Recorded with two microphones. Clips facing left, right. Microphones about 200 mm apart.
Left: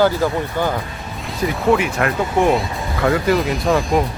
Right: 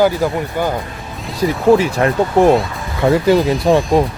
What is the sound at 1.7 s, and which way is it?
Speech, 35° right (ahead or behind).